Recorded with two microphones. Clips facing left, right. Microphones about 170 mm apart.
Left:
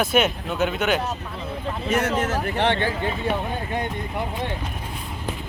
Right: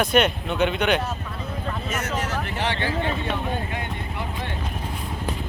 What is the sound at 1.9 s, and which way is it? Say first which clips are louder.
Speech: left 7 dB; 55° left (ahead or behind).